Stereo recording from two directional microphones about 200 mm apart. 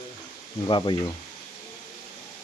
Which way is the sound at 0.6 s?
25° left (ahead or behind).